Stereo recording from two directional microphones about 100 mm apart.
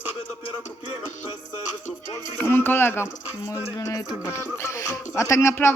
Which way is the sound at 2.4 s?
20° left (ahead or behind).